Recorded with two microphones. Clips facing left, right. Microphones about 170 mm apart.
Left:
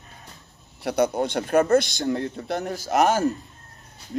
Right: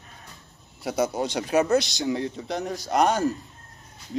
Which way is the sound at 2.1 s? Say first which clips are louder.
Left 1 dB; 5° right (ahead or behind).